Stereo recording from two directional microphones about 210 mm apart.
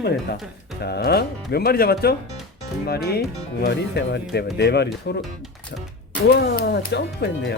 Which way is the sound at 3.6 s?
55° left (ahead or behind).